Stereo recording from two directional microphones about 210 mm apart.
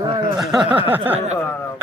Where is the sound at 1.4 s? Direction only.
10° left (ahead or behind).